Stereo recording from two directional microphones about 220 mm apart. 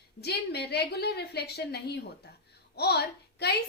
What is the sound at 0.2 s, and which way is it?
A woman's voice, 45° left (ahead or behind).